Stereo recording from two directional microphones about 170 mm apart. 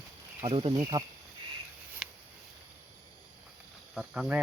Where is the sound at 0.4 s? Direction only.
35° right (ahead or behind).